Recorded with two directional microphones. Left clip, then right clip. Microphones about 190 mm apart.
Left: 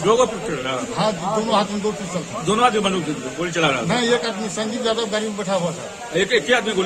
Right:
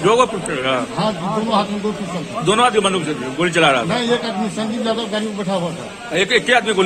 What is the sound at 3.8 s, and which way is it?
A man's voice, 20° left (ahead or behind).